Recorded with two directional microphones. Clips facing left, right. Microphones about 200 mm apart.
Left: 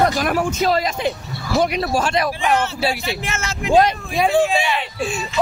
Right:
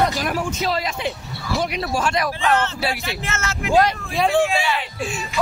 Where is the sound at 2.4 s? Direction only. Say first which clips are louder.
Right 1 dB; 10° left (ahead or behind).